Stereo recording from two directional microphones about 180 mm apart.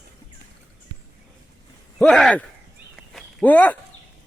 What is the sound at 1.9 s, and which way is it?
Speech, 5° left (ahead or behind).